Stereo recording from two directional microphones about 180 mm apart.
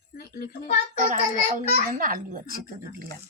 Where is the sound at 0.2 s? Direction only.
55° left (ahead or behind).